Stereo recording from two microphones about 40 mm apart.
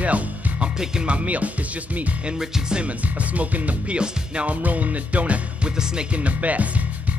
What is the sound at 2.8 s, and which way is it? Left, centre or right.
Music, right.